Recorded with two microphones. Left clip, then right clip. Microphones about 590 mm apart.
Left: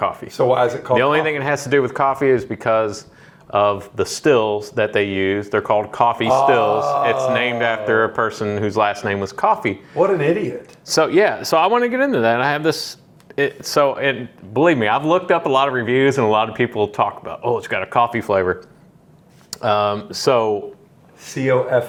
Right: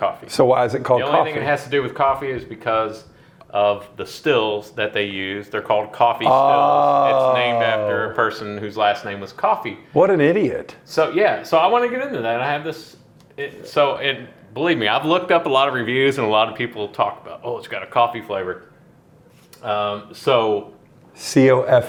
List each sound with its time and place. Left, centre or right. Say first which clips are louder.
0.3 s speech: right 1 dB; right
0.9 s speech: left 2 dB; left
6.3 s a man's voice: even; right
7.3 s speech: right 1 dB; left
9.9 s speech: right 2 dB; right
10.8 s speech: left 2 dB; left
18.3 s speech: left 7 dB; left
21.3 s speech: right 3 dB; right